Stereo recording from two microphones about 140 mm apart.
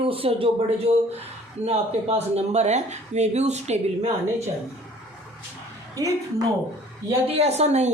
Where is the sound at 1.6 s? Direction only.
50° right (ahead or behind).